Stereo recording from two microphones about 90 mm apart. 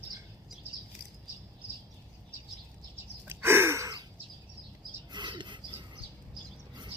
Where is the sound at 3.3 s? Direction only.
25° right (ahead or behind).